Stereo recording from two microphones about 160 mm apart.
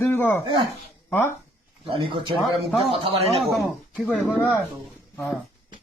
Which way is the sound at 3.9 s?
Centre (ahead or behind).